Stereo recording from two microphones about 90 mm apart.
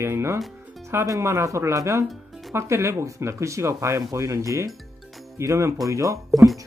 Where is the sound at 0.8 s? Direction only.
35° right (ahead or behind).